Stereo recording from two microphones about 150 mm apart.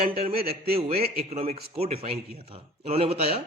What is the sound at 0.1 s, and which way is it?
Speech, 40° right (ahead or behind).